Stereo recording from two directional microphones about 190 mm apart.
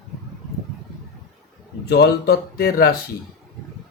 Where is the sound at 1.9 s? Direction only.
60° left (ahead or behind).